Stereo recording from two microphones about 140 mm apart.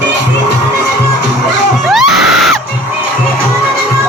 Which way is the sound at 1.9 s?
Centre (ahead or behind).